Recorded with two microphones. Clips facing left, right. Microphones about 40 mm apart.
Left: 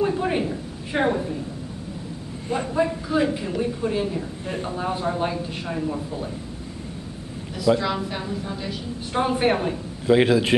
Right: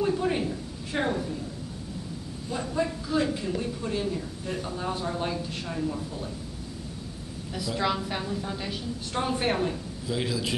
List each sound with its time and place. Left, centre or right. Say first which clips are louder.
0.0 s a woman's voice: left 3 dB; left
2.7 s a woman's voice: left 4 dB; centre
7.7 s a man's voice: left 14 dB; left
8.3 s a woman's voice: left 3 dB; centre
9.1 s a woman's voice: left 6 dB; centre
10.0 s a man's voice: left 13 dB; left